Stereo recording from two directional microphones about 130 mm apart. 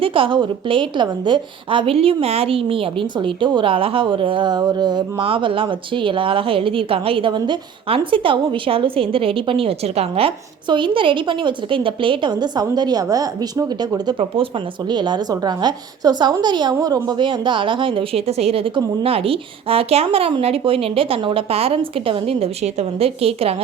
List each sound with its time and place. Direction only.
0.0 s a woman's voice: 45° right (ahead or behind)